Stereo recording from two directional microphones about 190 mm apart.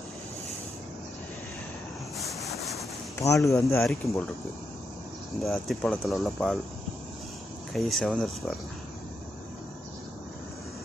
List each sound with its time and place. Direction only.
2.1 s boat: centre (ahead or behind)
3.2 s speech: 15° left (ahead or behind)
5.4 s speech: centre (ahead or behind)
7.7 s speech: centre (ahead or behind)